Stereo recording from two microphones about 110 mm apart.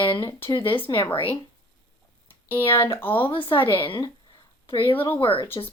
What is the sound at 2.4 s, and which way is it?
Speech, 20° left (ahead or behind).